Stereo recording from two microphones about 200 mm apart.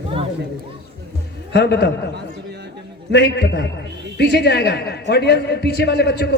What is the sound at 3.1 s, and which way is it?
A man's voice, 55° left (ahead or behind).